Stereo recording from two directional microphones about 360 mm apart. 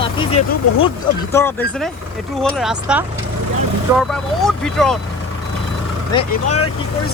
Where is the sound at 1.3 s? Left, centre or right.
Centre.